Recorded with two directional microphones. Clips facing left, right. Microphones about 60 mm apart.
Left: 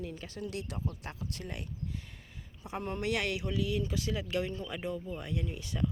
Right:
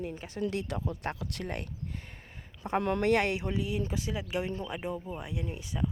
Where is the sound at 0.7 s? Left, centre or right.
Right.